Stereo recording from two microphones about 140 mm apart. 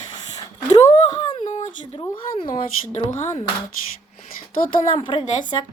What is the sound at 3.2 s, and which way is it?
Speech, 60° left (ahead or behind).